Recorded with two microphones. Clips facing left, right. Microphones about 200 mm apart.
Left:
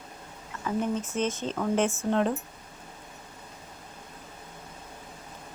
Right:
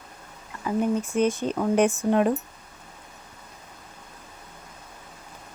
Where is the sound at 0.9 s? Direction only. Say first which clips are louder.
Right 6 dB; 10° right (ahead or behind).